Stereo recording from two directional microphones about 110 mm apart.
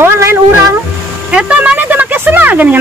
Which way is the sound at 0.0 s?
20° right (ahead or behind).